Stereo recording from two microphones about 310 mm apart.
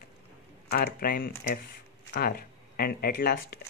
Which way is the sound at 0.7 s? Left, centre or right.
Left.